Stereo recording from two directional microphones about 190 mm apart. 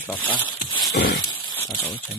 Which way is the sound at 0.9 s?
60° left (ahead or behind).